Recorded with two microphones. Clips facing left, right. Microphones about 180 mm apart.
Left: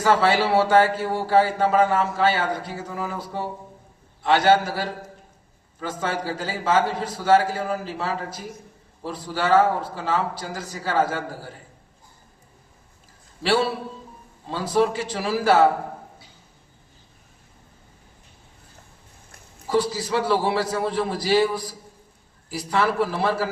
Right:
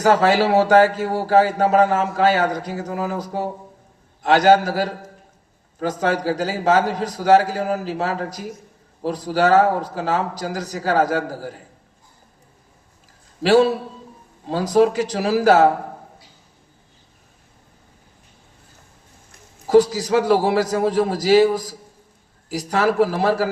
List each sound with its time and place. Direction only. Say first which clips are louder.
0.0 s a man's voice: right 4 dB; 40° right (ahead or behind)
13.4 s a man's voice: right 7 dB; 40° right (ahead or behind)
19.6 s a man's voice: right 8 dB; 45° right (ahead or behind)